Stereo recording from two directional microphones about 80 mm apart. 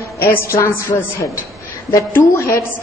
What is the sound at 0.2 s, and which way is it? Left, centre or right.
A woman's voice, left.